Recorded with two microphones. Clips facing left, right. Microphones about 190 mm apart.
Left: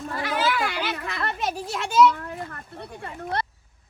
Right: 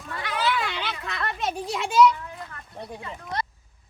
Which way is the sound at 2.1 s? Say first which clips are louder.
Left 4 dB; 60° left (ahead or behind).